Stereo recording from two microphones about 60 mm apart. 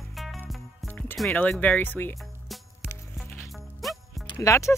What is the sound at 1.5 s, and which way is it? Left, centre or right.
Speech, left.